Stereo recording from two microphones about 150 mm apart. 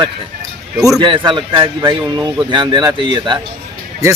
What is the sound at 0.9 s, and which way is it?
Speech, 30° right (ahead or behind).